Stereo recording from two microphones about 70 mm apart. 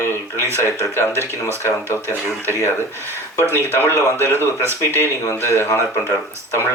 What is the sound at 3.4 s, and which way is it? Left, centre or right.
A man's voice, right.